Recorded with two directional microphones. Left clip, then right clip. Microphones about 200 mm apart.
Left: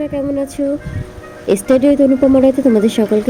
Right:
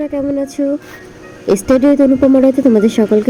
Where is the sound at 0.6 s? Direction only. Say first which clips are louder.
Right 1 dB; 10° right (ahead or behind).